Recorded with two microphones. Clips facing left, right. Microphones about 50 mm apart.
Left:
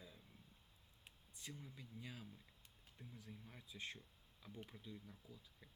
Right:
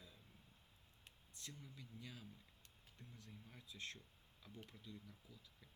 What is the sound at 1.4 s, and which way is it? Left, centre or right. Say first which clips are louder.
Speech: left 2 dB; centre.